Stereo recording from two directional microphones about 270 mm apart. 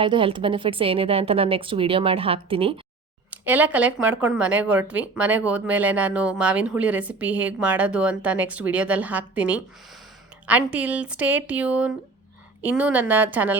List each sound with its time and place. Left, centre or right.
0.0 s a woman's voice: centre
3.2 s a woman's voice: centre